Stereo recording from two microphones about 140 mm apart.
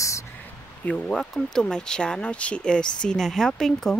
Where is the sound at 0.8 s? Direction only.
10° left (ahead or behind).